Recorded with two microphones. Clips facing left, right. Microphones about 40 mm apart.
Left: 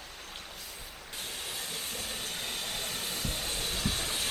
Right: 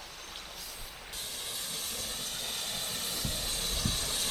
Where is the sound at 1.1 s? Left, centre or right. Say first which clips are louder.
Left 3 dB; centre.